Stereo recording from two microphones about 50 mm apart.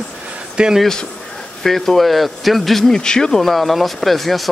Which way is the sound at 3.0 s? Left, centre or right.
Centre.